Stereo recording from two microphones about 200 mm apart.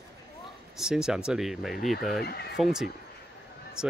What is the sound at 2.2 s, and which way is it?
Speech, 50° left (ahead or behind).